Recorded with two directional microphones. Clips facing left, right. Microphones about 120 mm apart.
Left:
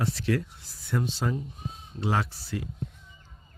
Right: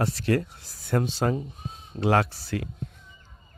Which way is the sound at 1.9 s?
70° right (ahead or behind).